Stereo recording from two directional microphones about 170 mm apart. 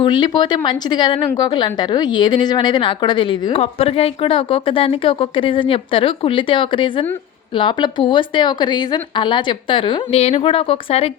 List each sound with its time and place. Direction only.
0.0 s a woman's voice: 25° left (ahead or behind)